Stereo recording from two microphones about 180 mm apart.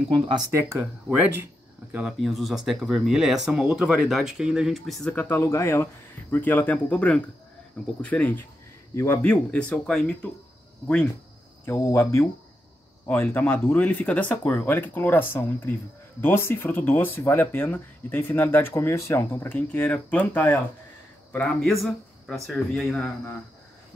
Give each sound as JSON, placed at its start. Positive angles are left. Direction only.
{"t": 0.3, "sound": "speech", "side_deg": -15}
{"t": 11.6, "sound": "speech", "side_deg": 15}